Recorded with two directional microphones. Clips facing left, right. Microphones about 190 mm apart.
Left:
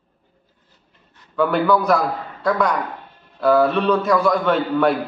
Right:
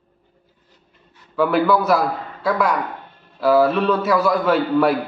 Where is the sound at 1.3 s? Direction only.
Centre (ahead or behind).